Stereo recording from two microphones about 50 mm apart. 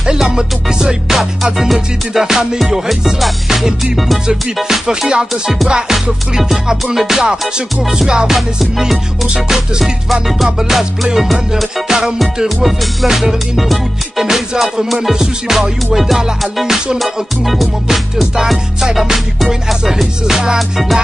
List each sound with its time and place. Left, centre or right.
0.0 s music: centre
5.3 s music: centre
5.7 s music: centre
8.4 s music: centre